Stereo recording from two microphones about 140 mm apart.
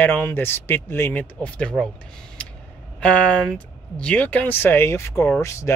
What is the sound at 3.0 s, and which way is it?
Speech, 10° left (ahead or behind).